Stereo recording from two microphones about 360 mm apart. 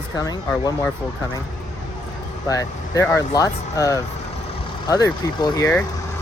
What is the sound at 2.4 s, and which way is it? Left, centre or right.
Speech, centre.